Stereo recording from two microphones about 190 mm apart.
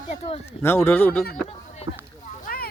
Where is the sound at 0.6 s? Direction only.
10° left (ahead or behind).